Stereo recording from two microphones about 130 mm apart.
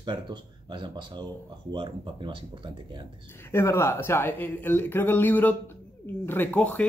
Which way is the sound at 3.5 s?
20° left (ahead or behind).